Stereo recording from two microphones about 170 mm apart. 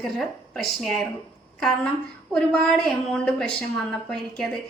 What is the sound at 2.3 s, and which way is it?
A woman's voice, 5° left (ahead or behind).